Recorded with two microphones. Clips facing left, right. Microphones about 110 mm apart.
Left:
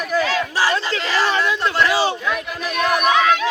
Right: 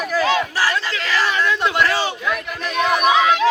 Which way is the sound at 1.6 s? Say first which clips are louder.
Even; 15° right (ahead or behind).